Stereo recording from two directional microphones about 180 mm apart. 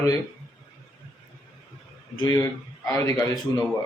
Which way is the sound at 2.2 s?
25° left (ahead or behind).